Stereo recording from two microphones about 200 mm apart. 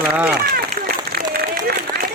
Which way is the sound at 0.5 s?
50° right (ahead or behind).